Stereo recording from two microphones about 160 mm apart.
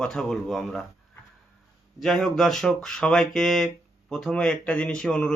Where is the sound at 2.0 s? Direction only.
Centre (ahead or behind).